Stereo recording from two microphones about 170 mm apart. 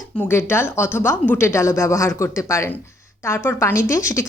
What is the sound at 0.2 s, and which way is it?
A woman's voice, 15° left (ahead or behind).